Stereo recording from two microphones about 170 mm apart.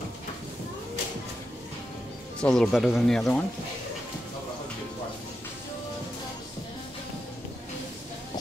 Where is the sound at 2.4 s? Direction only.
5° left (ahead or behind).